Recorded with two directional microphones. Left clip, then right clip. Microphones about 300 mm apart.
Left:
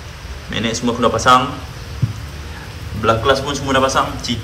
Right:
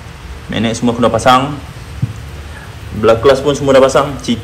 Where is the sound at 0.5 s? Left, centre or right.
Centre.